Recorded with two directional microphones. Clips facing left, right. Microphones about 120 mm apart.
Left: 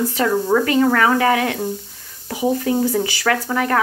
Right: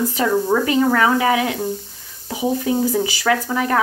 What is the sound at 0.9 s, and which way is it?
Speech, 15° right (ahead or behind).